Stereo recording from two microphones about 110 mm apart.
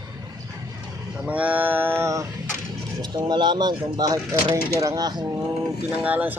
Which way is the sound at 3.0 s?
40° right (ahead or behind).